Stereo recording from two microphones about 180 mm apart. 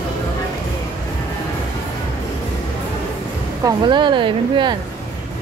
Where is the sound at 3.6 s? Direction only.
25° right (ahead or behind).